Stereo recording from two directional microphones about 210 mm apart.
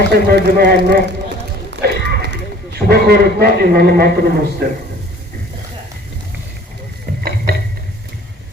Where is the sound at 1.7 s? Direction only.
55° right (ahead or behind).